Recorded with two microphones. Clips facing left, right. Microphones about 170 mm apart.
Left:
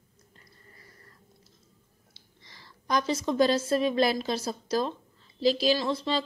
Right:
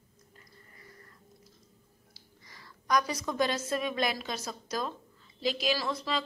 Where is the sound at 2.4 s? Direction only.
25° left (ahead or behind).